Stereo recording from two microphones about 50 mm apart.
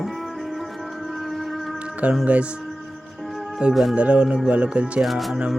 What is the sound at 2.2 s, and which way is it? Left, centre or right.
Speech, right.